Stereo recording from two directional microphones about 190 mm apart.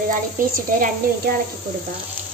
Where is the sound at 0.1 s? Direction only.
45° right (ahead or behind).